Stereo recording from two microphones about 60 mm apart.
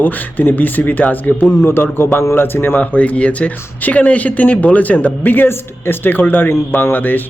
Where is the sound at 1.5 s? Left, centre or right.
Left.